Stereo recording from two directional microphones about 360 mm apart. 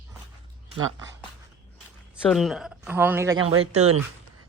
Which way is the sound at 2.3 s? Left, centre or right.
Centre.